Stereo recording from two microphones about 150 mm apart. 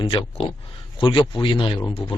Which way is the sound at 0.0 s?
35° left (ahead or behind).